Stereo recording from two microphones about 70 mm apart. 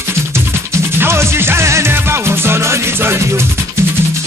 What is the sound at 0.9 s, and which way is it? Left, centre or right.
Music, right.